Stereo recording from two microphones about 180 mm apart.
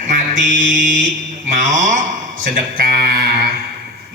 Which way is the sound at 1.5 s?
45° right (ahead or behind).